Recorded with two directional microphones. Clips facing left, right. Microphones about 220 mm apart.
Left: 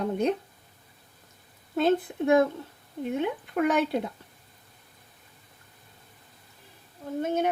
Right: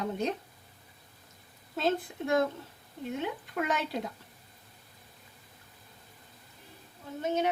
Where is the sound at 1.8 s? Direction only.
55° left (ahead or behind).